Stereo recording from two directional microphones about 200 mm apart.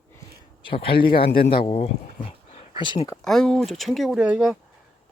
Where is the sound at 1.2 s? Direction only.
50° left (ahead or behind).